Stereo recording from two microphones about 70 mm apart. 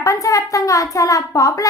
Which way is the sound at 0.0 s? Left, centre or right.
Left.